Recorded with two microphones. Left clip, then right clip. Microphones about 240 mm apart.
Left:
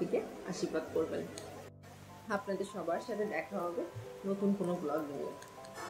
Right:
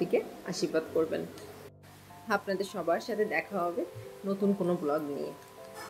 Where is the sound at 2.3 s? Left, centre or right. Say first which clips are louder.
Right 6 dB; right.